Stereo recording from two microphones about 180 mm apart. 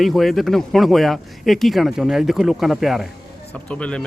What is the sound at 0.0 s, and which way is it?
Speech, centre (ahead or behind).